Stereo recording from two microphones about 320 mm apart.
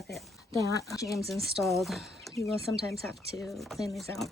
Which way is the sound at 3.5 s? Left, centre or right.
Centre.